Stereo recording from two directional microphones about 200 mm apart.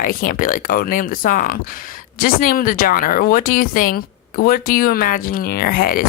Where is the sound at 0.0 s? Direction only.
45° left (ahead or behind).